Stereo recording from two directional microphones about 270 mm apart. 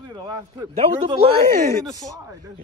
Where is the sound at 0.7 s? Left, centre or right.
Right.